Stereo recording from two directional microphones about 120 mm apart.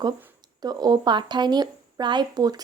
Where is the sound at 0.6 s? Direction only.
35° right (ahead or behind).